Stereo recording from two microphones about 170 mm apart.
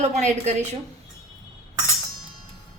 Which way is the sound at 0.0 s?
45° right (ahead or behind).